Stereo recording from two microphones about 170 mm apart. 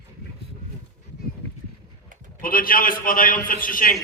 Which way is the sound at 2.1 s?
50° right (ahead or behind).